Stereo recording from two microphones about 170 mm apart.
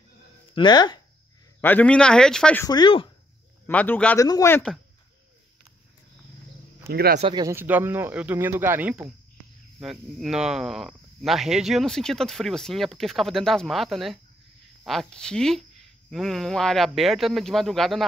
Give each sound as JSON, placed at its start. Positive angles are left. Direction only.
{"t": 0.6, "sound": "speech", "side_deg": 25}
{"t": 1.6, "sound": "speech", "side_deg": 10}
{"t": 2.6, "sound": "speech", "side_deg": 25}
{"t": 3.6, "sound": "speech", "side_deg": 10}
{"t": 6.9, "sound": "speech", "side_deg": -65}
{"t": 7.2, "sound": "speech", "side_deg": -30}
{"t": 7.4, "sound": "speech", "side_deg": -10}